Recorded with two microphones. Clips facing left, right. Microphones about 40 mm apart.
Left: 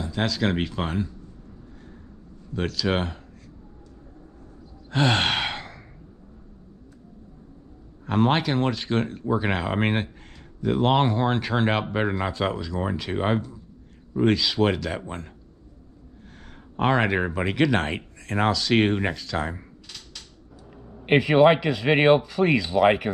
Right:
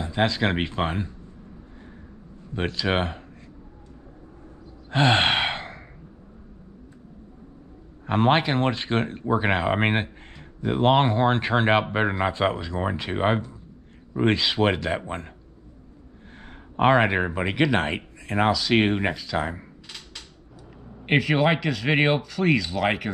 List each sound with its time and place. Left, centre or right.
0.0 s speech: right
2.5 s speech: right
4.8 s sigh: right
8.0 s speech: right
16.3 s speech: right
19.1 s a sound: centre
21.2 s speech: centre